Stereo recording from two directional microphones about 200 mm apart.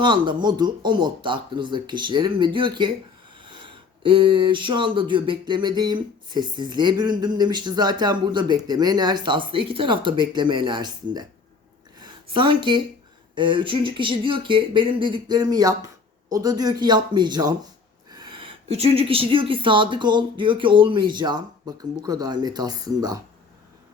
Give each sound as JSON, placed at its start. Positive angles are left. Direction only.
{"t": 0.0, "sound": "speech", "side_deg": -25}
{"t": 11.9, "sound": "a sound", "side_deg": -25}
{"t": 13.3, "sound": "speech", "side_deg": -25}